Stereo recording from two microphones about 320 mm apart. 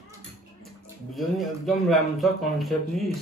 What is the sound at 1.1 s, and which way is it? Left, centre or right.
Speech, centre.